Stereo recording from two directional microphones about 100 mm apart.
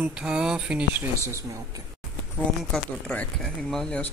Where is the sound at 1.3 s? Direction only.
30° right (ahead or behind).